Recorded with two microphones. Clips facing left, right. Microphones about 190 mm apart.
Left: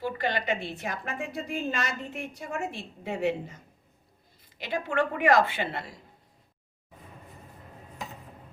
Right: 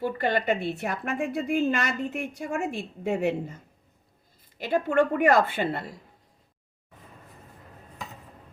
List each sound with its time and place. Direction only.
0.2 s a woman's voice: 55° right (ahead or behind)